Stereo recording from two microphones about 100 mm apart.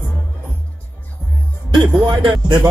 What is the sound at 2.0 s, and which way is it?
Speech, 50° right (ahead or behind).